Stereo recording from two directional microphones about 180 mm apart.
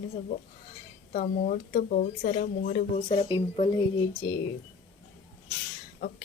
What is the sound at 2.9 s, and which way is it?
Speech, 40° left (ahead or behind).